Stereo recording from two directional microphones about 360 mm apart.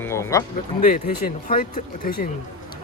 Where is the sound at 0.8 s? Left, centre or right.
Left.